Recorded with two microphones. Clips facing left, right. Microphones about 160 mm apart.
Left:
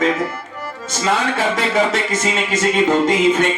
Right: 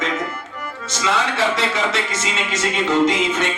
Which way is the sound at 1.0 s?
50° left (ahead or behind).